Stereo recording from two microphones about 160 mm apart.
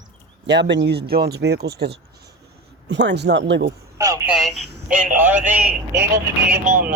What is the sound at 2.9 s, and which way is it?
Speech, 90° right.